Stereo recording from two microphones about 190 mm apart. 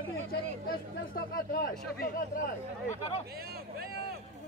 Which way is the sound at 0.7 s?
50° left (ahead or behind).